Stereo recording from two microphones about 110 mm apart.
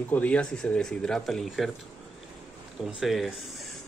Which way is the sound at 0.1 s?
10° left (ahead or behind).